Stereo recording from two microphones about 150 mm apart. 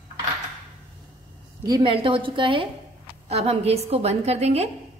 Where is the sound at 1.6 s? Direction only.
30° right (ahead or behind).